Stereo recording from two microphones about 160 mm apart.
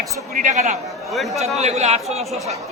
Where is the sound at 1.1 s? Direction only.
Centre (ahead or behind).